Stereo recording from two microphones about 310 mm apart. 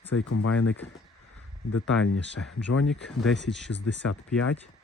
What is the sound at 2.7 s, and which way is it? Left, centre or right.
Speech, left.